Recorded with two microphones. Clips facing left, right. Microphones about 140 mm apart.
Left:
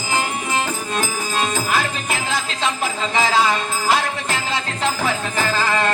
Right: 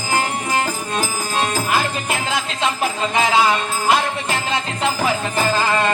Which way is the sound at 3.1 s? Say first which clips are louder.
Right 1 dB; 15° right (ahead or behind).